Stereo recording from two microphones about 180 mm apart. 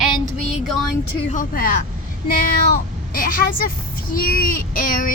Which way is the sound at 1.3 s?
50° left (ahead or behind).